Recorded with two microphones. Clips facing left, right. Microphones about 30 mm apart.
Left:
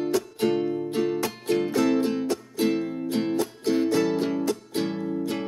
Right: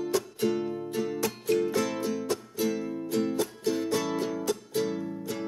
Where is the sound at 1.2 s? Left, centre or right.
Left.